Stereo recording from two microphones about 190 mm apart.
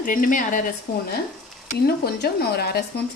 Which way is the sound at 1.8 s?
55° left (ahead or behind).